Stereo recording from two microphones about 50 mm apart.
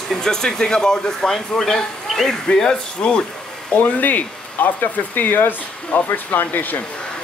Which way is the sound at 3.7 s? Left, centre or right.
Left.